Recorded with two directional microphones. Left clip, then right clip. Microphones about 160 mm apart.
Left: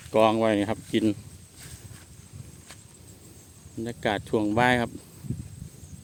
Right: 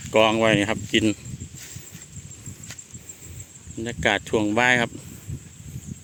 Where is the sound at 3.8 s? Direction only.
5° left (ahead or behind).